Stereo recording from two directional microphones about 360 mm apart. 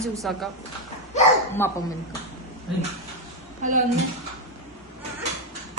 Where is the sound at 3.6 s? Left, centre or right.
Right.